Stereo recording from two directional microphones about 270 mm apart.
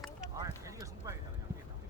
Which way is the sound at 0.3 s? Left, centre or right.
Centre.